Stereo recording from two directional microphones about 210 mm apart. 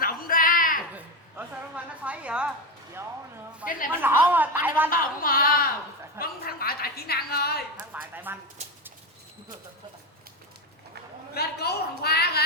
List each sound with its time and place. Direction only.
0.0 s a sound: 40° left (ahead or behind)
0.9 s a sound: 5° right (ahead or behind)
4.0 s speech: 10° right (ahead or behind)
4.9 s a woman's voice: 45° left (ahead or behind)
7.8 s a woman's voice: 10° right (ahead or behind)
11.3 s a woman's voice: 50° left (ahead or behind)